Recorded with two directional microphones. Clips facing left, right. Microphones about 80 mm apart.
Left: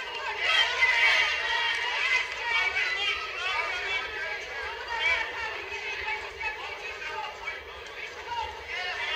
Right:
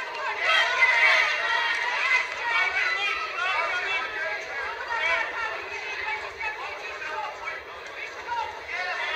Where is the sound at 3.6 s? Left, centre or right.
Right.